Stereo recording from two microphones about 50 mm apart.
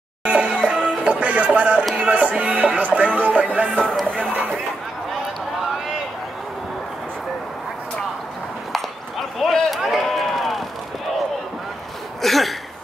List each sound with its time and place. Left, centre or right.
0.2 s music: right
3.5 s speech: right
4.2 s chatter: right
9.4 s a sound: centre
9.8 s run: centre
10.0 s a sound: centre
12.2 s cough: centre